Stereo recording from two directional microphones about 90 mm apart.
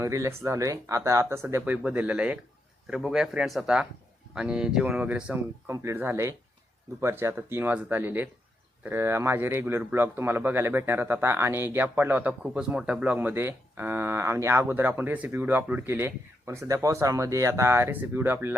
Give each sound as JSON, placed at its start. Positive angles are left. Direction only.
{"t": 0.0, "sound": "speech", "side_deg": -35}
{"t": 5.6, "sound": "a man's voice", "side_deg": -30}
{"t": 13.1, "sound": "a man's voice", "side_deg": -25}